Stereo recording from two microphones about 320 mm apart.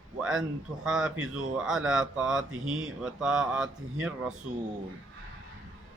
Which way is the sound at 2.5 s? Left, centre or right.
Right.